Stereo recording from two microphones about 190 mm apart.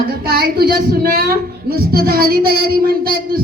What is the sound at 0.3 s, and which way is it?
A woman's voice, 55° right (ahead or behind).